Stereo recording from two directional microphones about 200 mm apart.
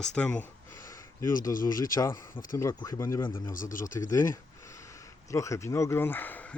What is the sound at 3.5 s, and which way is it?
Speech, 40° left (ahead or behind).